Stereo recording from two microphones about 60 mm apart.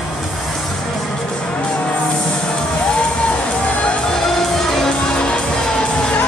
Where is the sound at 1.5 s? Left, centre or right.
Left.